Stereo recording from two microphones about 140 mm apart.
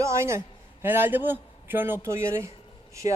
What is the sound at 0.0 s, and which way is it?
A man's voice, 20° right (ahead or behind).